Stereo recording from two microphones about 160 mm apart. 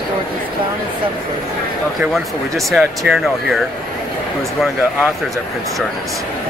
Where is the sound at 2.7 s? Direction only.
Centre (ahead or behind).